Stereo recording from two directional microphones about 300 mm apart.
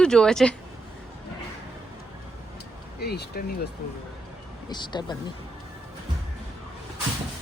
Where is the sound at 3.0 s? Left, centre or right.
Left.